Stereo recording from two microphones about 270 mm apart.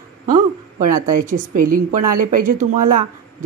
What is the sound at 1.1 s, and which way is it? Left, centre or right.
A woman's voice, right.